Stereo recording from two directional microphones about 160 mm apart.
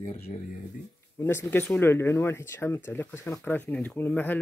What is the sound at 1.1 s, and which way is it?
Speech, 15° left (ahead or behind).